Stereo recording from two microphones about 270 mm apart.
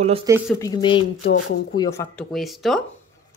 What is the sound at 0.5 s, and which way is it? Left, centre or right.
Speech, centre.